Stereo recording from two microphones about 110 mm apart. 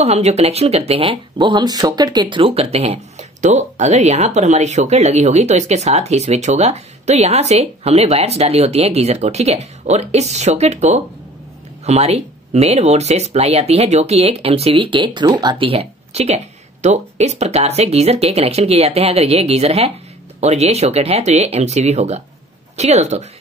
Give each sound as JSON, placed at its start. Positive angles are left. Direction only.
{"t": 0.0, "sound": "speech", "side_deg": -75}
{"t": 1.4, "sound": "speech", "side_deg": -40}
{"t": 11.8, "sound": "speech", "side_deg": -75}
{"t": 15.6, "sound": "speech", "side_deg": -60}
{"t": 16.8, "sound": "speech", "side_deg": -90}